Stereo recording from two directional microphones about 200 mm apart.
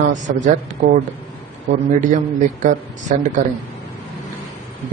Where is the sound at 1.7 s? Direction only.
40° right (ahead or behind).